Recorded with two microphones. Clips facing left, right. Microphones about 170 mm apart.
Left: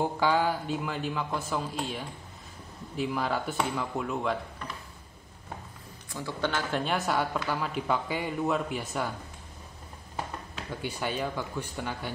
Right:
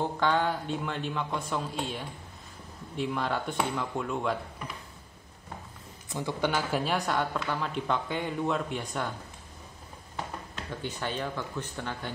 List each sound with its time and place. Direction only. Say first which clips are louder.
0.0 s speech: left 1 dB; 5° left (ahead or behind)
6.0 s speech: right 2 dB; 20° right (ahead or behind); by 9.1 s 5° left (ahead or behind)
10.1 s speech: left 1 dB; 10° left (ahead or behind)